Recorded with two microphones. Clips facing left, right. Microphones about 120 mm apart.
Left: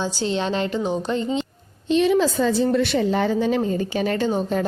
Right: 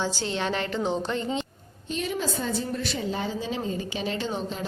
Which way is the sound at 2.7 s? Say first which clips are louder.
Left 10 dB; 70° left (ahead or behind).